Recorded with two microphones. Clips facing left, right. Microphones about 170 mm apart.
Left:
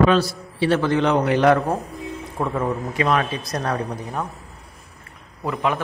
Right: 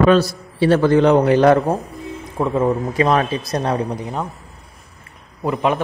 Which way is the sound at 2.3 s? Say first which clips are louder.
Right 6 dB; 20° right (ahead or behind).